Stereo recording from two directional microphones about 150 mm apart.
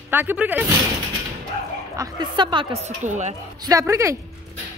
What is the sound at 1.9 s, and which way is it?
Speech, 25° right (ahead or behind).